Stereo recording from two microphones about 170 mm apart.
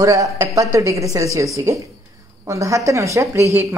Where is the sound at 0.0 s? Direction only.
20° right (ahead or behind).